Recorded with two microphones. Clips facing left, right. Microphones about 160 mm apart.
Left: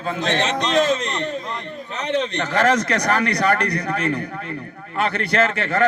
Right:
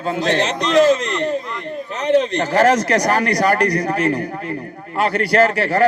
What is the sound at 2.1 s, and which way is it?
Speech, 35° right (ahead or behind).